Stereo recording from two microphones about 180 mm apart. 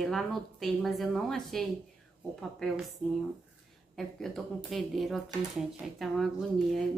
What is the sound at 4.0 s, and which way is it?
A woman's voice, centre (ahead or behind).